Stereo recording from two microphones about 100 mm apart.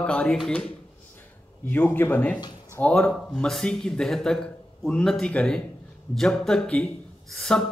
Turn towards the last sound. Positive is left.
turn(degrees=5)  # may be behind; listen again after turning